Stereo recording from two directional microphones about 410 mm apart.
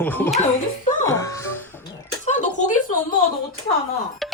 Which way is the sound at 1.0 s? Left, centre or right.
Centre.